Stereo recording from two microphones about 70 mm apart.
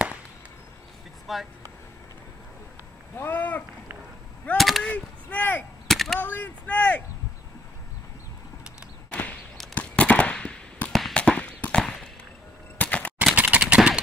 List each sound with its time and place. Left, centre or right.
1.2 s speech: centre
3.2 s speech: left
4.6 s gunshot: centre
4.8 s speech: left
5.9 s a sound: centre
6.1 s speech: left
9.8 s firecracker: centre
10.9 s firecracker: centre
11.1 s a sound: centre
13.3 s a sound: right